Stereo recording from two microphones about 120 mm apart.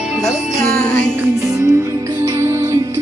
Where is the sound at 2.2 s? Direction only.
25° right (ahead or behind).